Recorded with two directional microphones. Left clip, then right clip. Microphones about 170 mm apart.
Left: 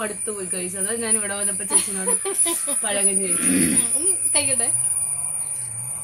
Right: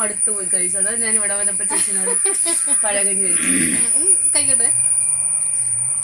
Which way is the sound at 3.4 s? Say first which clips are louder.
Right 1 dB; 20° left (ahead or behind).